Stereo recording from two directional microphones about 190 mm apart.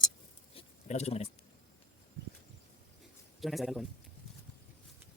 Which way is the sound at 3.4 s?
Centre (ahead or behind).